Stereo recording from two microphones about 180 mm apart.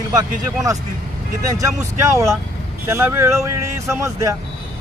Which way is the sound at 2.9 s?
15° right (ahead or behind).